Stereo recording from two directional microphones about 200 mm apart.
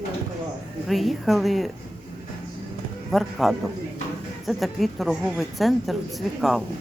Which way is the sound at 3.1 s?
Centre (ahead or behind).